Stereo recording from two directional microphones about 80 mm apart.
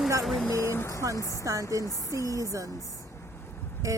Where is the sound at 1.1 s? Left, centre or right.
Left.